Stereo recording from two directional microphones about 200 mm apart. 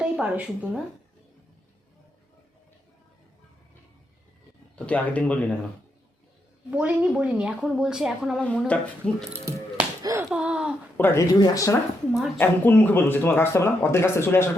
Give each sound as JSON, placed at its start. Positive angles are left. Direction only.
{"t": 0.0, "sound": "a woman's voice", "side_deg": -5}
{"t": 4.9, "sound": "speech", "side_deg": 5}
{"t": 6.7, "sound": "a woman's voice", "side_deg": -5}
{"t": 10.0, "sound": "a sound", "side_deg": -15}
{"t": 10.2, "sound": "a sound", "side_deg": -5}
{"t": 10.9, "sound": "speech", "side_deg": 10}